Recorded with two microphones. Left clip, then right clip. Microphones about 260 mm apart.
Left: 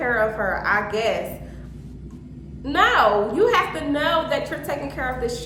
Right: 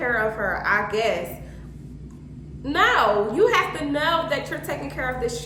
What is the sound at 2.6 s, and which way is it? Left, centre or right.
A woman's voice, centre.